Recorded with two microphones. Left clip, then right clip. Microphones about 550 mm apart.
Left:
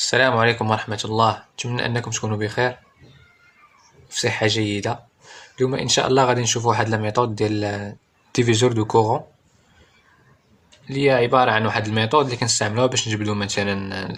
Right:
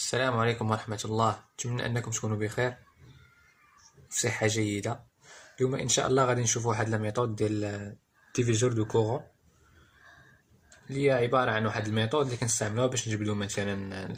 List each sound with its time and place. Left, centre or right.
0.0 s speech: left
4.1 s speech: left
10.8 s speech: left